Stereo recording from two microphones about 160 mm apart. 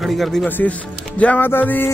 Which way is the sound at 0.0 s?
Centre (ahead or behind).